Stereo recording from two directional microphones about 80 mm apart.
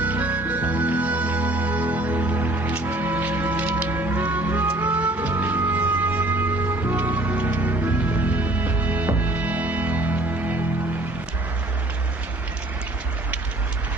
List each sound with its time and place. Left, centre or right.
0.0 s music: centre